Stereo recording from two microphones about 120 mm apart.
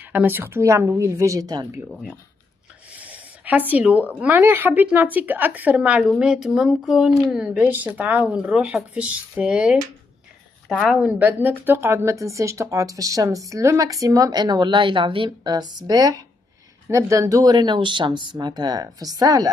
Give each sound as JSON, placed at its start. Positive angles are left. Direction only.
{"t": 0.0, "sound": "a woman's voice", "side_deg": -15}
{"t": 2.9, "sound": "a sound", "side_deg": -10}
{"t": 4.2, "sound": "a woman's voice", "side_deg": -15}